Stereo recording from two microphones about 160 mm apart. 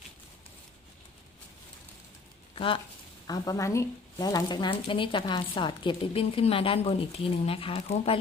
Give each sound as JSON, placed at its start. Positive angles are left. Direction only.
{"t": 3.2, "sound": "speech", "side_deg": 25}